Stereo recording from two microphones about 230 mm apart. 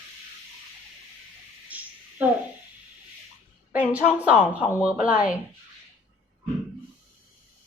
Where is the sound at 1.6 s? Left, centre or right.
Centre.